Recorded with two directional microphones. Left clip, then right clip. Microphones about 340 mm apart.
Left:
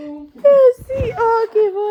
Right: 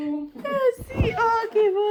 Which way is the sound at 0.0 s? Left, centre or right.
Centre.